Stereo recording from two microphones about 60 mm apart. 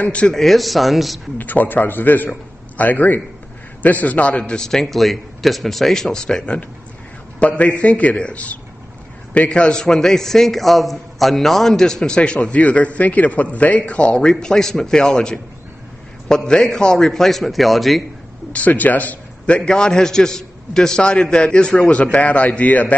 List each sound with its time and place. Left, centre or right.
0.3 s speech: centre
1.4 s a man's voice: left
4.6 s a man's voice: centre
18.5 s a man's voice: left